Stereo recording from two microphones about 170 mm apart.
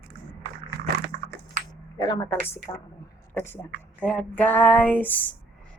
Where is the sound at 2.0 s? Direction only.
20° left (ahead or behind).